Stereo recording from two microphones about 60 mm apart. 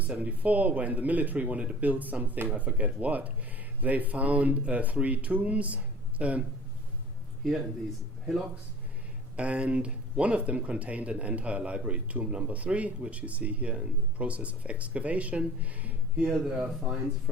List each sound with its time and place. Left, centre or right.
0.0 s speech: right
9.3 s speech: right